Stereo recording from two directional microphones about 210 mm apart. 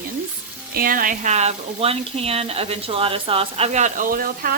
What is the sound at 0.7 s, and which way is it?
Speech, 45° right (ahead or behind).